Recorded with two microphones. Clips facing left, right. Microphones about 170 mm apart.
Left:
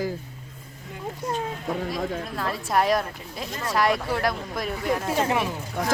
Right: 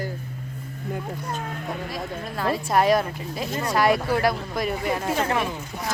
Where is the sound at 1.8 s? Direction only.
Centre (ahead or behind).